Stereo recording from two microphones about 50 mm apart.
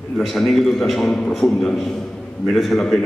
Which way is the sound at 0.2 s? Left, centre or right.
Centre.